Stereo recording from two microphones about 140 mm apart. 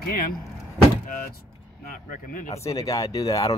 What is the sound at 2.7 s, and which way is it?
Speech, 25° left (ahead or behind).